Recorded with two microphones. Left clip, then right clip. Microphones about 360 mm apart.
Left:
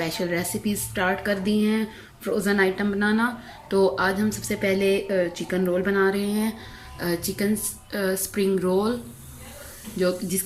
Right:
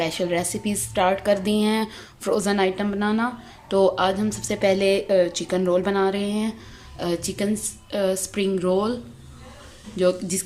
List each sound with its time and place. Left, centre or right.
0.0 s a woman's voice: centre
10.0 s a woman's voice: centre